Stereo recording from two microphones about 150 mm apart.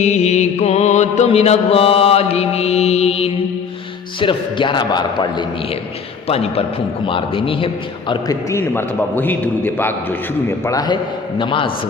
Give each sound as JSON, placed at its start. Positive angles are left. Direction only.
{"t": 0.0, "sound": "mantra", "side_deg": 50}
{"t": 4.2, "sound": "a man's voice", "side_deg": 35}
{"t": 6.2, "sound": "a man's voice", "side_deg": 40}
{"t": 8.4, "sound": "a man's voice", "side_deg": 15}
{"t": 10.7, "sound": "a man's voice", "side_deg": 25}
{"t": 11.3, "sound": "a man's voice", "side_deg": 35}